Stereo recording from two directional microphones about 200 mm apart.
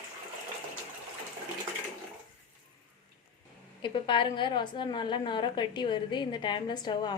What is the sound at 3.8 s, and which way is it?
A woman's voice, 25° left (ahead or behind).